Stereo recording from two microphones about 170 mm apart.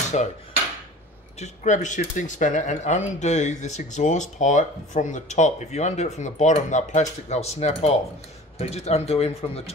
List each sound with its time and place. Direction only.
0.1 s speech: 45° left (ahead or behind)
1.4 s speech: 45° left (ahead or behind)